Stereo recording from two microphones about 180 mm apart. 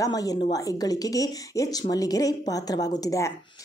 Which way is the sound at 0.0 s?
20° left (ahead or behind).